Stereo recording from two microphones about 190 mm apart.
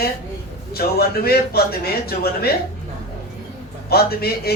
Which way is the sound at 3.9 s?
55° left (ahead or behind).